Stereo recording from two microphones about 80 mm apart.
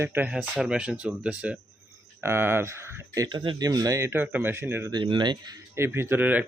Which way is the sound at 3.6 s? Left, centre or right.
Right.